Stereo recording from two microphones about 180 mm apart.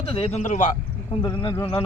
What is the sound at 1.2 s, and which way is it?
Speech, 25° left (ahead or behind).